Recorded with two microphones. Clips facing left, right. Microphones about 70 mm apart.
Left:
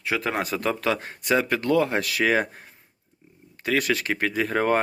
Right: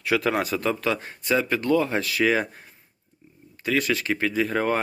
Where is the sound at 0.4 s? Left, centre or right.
Left.